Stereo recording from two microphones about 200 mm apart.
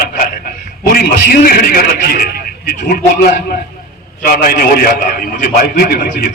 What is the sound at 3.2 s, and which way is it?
A man's voice, 50° left (ahead or behind).